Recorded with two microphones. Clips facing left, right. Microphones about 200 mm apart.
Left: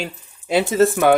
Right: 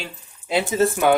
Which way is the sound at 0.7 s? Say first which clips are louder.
Left 4 dB; 85° left.